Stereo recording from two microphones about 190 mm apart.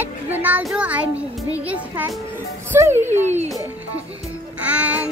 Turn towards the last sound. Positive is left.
turn(degrees=-10)  # may be behind; listen again after turning